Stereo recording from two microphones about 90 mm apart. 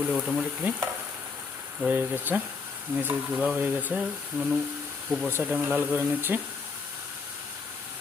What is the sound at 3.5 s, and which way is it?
Speech, 20° right (ahead or behind).